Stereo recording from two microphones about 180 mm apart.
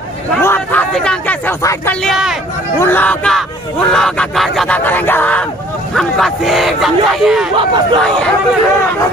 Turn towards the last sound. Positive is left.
turn(degrees=0)  # may be behind; listen again after turning